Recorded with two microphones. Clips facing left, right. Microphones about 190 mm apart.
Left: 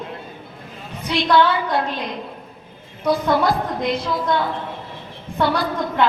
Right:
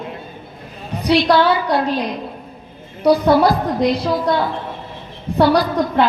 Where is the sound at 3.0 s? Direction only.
35° right (ahead or behind).